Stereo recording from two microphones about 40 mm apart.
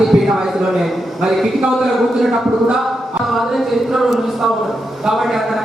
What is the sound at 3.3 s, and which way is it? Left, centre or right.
A man's voice, centre.